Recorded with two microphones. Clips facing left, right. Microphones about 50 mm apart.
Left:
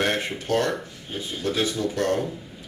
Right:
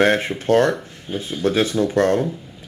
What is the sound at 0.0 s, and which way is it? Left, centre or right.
Speech, right.